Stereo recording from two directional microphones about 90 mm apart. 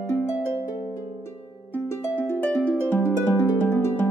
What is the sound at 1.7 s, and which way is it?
Harp, 25° left (ahead or behind).